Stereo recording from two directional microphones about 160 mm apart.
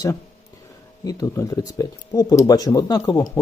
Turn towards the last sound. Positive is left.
turn(degrees=25)  # may be behind; listen again after turning